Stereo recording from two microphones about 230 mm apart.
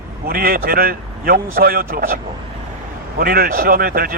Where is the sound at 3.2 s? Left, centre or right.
Right.